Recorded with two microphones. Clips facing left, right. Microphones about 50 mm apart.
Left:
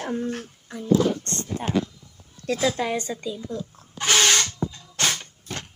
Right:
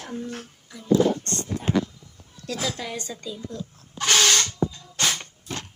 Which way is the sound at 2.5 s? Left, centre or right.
Left.